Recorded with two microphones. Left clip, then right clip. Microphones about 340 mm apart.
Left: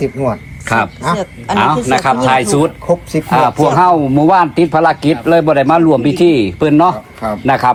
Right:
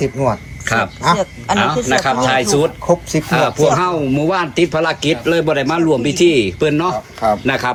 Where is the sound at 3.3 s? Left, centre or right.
Centre.